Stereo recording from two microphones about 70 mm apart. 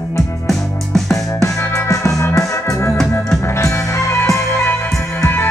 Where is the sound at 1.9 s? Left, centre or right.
Left.